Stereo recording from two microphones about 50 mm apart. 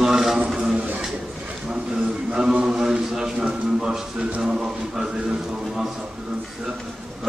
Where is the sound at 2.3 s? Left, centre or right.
Centre.